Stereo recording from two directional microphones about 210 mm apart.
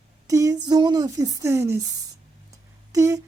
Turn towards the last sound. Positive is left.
turn(degrees=-15)  # may be behind; listen again after turning